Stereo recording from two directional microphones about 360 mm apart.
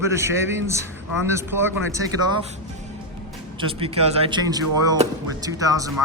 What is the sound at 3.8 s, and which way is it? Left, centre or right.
Speech, centre.